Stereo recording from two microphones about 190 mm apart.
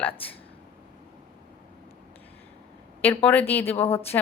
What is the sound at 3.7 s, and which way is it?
Speech, 30° left (ahead or behind).